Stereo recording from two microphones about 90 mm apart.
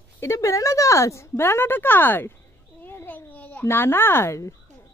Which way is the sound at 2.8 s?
25° left (ahead or behind).